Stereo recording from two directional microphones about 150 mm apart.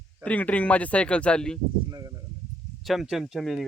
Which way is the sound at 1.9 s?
25° right (ahead or behind).